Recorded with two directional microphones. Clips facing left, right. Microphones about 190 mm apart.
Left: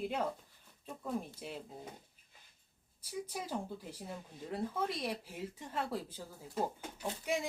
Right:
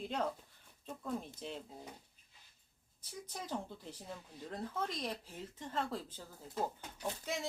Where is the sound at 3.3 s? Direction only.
10° left (ahead or behind).